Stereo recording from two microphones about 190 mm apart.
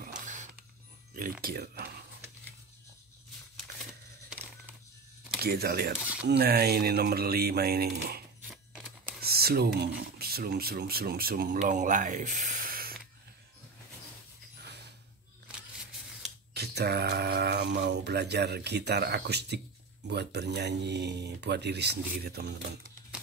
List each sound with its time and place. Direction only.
0.0 s a sound: 40° right (ahead or behind)
1.1 s speech: 50° right (ahead or behind)
4.3 s a sound: 10° right (ahead or behind)
5.4 s speech: 55° right (ahead or behind)
8.4 s scissors: 10° right (ahead or behind)
9.2 s speech: 55° right (ahead or behind)
16.5 s speech: 60° right (ahead or behind)